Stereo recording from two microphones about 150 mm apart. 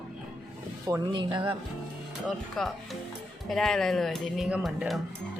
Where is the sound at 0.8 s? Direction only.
25° right (ahead or behind).